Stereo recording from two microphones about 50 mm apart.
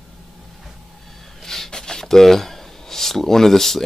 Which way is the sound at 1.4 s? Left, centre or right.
Centre.